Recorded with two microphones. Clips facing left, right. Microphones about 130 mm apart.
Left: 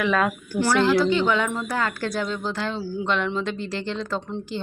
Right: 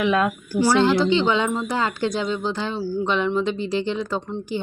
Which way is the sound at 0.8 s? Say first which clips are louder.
Left 1 dB; 25° right (ahead or behind).